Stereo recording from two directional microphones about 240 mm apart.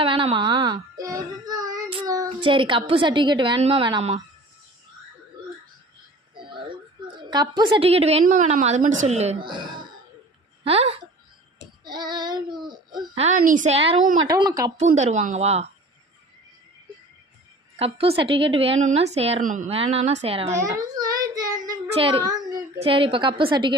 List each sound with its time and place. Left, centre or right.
0.0 s a child's voice: right
7.2 s a child's voice: centre
14.8 s a child's voice: right
17.7 s a child's voice: right
20.5 s child singing: centre
22.8 s a child's voice: right